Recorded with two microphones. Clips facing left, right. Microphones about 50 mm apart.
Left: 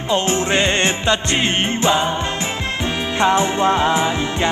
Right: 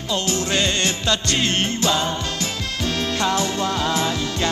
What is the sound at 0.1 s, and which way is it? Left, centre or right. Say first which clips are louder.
Music: left 5 dB; left.